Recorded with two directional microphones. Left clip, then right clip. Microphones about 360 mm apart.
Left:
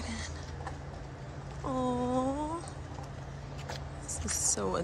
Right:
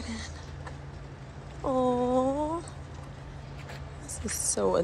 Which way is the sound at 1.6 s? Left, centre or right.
Centre.